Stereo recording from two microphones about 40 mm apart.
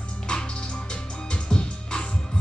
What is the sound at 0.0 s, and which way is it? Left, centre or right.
Music, left.